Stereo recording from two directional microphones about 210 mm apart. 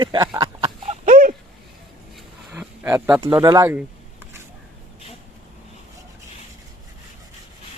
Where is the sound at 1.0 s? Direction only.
40° right (ahead or behind).